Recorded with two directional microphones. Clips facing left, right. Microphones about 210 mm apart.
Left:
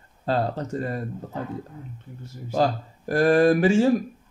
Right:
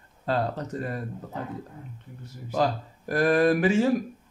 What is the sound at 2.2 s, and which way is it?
Speech, 30° left (ahead or behind).